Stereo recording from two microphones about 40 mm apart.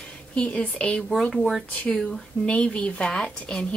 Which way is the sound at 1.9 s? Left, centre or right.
Centre.